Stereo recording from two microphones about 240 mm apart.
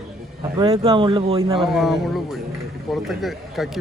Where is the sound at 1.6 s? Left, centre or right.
Centre.